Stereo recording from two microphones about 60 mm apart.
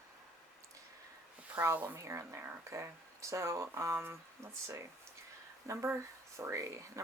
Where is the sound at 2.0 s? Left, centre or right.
Right.